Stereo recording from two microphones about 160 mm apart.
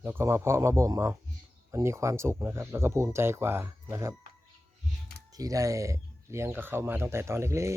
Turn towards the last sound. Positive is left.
turn(degrees=-20)  # may be behind; listen again after turning